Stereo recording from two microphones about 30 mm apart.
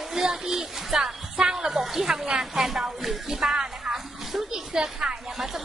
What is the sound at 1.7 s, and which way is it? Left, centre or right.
Speech, centre.